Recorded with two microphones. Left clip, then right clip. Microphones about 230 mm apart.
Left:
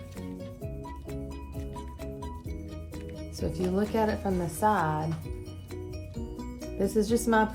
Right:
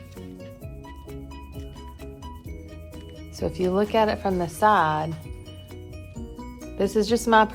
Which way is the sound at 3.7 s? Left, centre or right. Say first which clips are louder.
Right 7 dB; right.